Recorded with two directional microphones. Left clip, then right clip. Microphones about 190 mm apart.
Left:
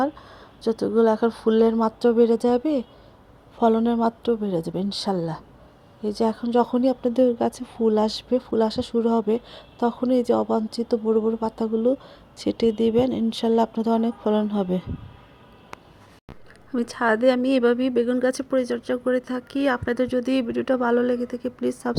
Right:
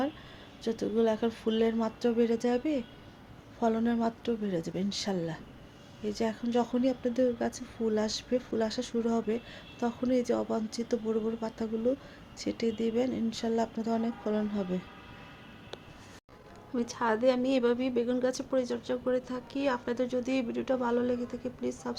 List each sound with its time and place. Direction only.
0.6 s speech: 35° left (ahead or behind)
11.0 s speech: 20° left (ahead or behind)
11.3 s speech: 35° left (ahead or behind)
16.7 s speech: 40° left (ahead or behind)